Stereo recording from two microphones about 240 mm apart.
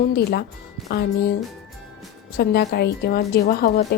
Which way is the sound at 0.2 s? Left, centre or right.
Left.